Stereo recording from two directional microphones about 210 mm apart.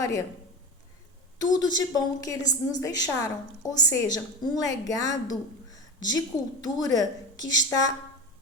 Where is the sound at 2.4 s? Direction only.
35° left (ahead or behind).